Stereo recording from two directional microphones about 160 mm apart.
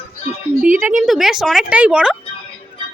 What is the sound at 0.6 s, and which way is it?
A woman's voice, 10° right (ahead or behind).